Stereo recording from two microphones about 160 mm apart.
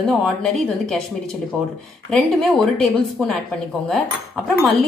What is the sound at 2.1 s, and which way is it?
A woman's voice, 5° left (ahead or behind).